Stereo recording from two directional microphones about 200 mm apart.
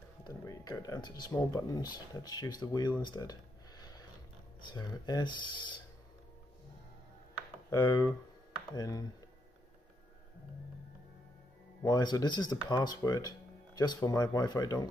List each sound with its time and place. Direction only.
0.2 s speech: 20° left (ahead or behind)
7.7 s speech: 20° left (ahead or behind)
11.8 s speech: 20° left (ahead or behind)